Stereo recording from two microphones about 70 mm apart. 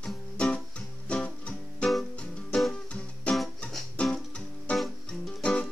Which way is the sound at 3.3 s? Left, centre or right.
Centre.